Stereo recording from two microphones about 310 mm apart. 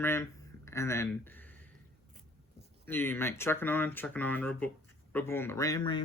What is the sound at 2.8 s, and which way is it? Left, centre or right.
Speech, centre.